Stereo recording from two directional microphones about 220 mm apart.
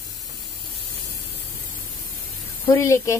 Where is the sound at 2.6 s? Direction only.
15° left (ahead or behind).